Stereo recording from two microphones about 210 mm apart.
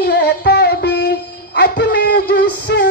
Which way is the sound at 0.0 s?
50° left (ahead or behind).